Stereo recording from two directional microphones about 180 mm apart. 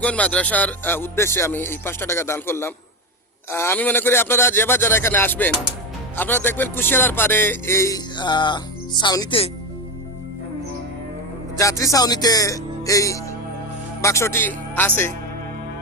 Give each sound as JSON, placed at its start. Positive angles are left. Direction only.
{"t": 0.0, "sound": "speech", "side_deg": 5}
{"t": 11.5, "sound": "speech", "side_deg": 20}